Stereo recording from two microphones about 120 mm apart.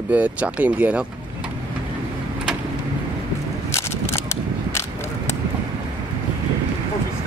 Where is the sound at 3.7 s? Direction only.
25° left (ahead or behind).